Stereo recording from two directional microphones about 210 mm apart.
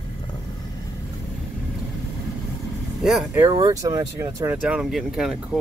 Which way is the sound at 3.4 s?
20° right (ahead or behind).